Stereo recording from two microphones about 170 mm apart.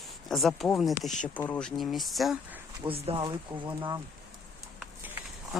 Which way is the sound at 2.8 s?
35° right (ahead or behind).